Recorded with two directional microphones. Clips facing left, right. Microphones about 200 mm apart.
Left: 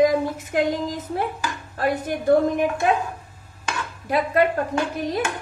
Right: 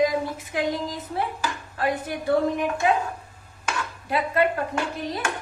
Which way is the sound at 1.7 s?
45° left (ahead or behind).